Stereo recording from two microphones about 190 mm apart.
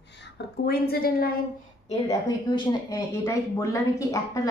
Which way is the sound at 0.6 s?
55° left (ahead or behind).